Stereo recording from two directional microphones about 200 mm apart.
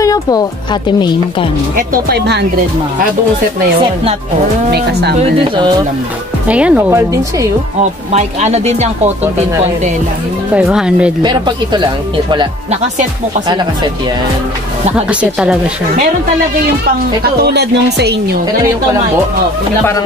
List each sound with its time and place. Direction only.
0.0 s speech: 20° left (ahead or behind)
1.8 s speech: 50° right (ahead or behind)
4.6 s speech: 55° right (ahead or behind)
5.4 s speech: 20° right (ahead or behind)
6.4 s speech: 5° right (ahead or behind)
8.1 s speech: 35° right (ahead or behind)
10.5 s speech: 5° right (ahead or behind)
11.2 s speech: 20° right (ahead or behind)
15.0 s speech: 5° right (ahead or behind)
17.2 s speech: 55° right (ahead or behind)